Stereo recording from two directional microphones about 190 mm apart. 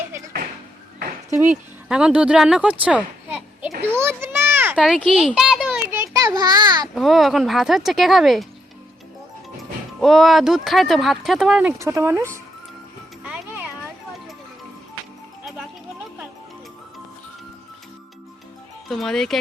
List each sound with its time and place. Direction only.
1.9 s a child's voice: 5° right (ahead or behind)
3.9 s a sound: 10° right (ahead or behind)
6.9 s speech: centre (ahead or behind)
10.0 s speech: centre (ahead or behind)
11.8 s speech: 15° right (ahead or behind)
13.2 s music: 5° right (ahead or behind)
18.9 s speech: centre (ahead or behind)